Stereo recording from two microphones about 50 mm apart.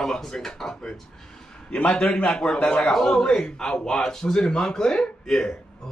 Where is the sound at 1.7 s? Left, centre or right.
Left.